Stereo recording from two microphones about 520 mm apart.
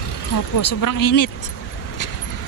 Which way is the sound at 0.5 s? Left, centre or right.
Left.